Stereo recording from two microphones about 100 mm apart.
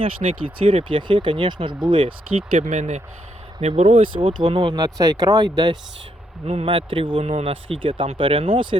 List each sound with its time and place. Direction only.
0.0 s speech: 65° right (ahead or behind)
3.6 s speech: 90° right; by 4.8 s 55° right (ahead or behind)
4.8 s speech: 35° right (ahead or behind)
6.4 s speech: 75° right (ahead or behind)